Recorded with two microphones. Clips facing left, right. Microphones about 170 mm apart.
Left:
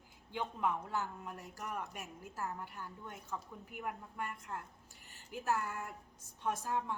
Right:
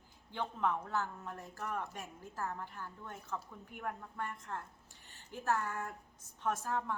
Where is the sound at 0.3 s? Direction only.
10° left (ahead or behind).